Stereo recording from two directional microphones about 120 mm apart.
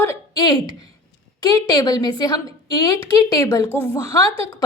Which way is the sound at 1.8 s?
35° left (ahead or behind).